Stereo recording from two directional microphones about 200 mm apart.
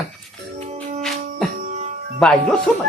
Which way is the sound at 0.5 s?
35° right (ahead or behind).